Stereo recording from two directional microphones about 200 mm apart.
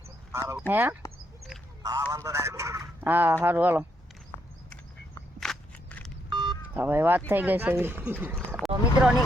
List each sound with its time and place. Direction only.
0.3 s speech: 15° right (ahead or behind)
4.7 s walk: 5° left (ahead or behind)
6.3 s a sound: 25° right (ahead or behind)
6.7 s speech: 10° right (ahead or behind)